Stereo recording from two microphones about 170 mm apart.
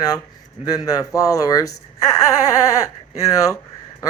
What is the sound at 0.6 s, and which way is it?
Speech, 20° left (ahead or behind).